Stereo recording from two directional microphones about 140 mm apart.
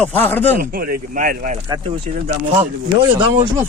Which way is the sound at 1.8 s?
50° right (ahead or behind).